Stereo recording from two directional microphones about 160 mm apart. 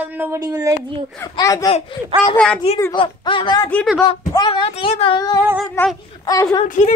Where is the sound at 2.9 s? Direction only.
30° left (ahead or behind).